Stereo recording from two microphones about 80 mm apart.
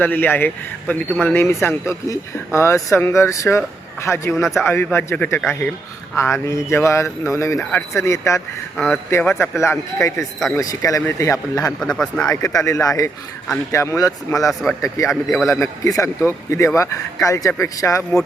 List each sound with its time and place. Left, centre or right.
0.0 s speech: left
7.6 s speech: centre
7.9 s speech: left
8.7 s a man's voice: centre
9.4 s speech: left
11.8 s speech: centre
12.2 s speech: left
15.1 s a man's voice: centre
15.4 s speech: left